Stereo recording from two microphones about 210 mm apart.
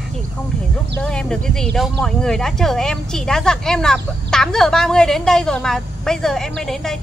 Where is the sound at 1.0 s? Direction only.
5° left (ahead or behind).